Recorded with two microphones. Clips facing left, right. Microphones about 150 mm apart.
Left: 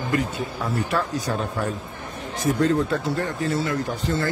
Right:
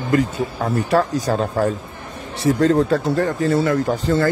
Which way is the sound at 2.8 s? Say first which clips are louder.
Right 6 dB; 40° right (ahead or behind).